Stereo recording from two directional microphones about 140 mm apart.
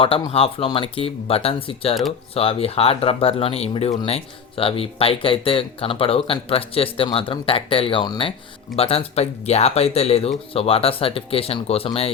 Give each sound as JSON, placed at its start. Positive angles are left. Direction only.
{"t": 0.3, "sound": "speech", "side_deg": 45}
{"t": 8.7, "sound": "speech", "side_deg": 45}